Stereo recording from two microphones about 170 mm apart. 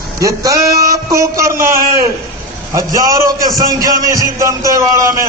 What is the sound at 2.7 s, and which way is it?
A man's voice, 20° right (ahead or behind).